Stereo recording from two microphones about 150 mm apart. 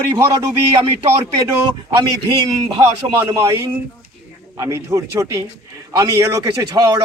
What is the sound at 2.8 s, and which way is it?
Speech, 20° right (ahead or behind).